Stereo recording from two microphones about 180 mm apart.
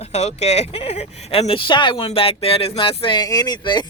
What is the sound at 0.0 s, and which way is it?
Speech, 40° left (ahead or behind).